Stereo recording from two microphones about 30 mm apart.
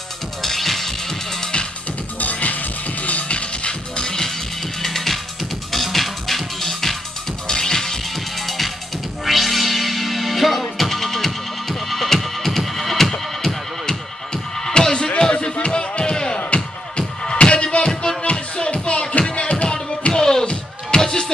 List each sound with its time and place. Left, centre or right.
0.4 s music: centre
2.4 s music: left
4.8 s music: centre
7.4 s music: left
8.4 s music: centre
13.8 s music: centre
16.3 s music: left
20.1 s music: centre